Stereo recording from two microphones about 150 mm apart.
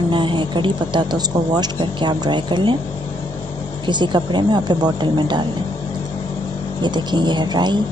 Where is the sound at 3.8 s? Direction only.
30° right (ahead or behind).